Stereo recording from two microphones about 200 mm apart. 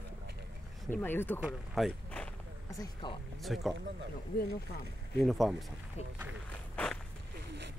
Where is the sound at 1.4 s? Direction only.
Centre (ahead or behind).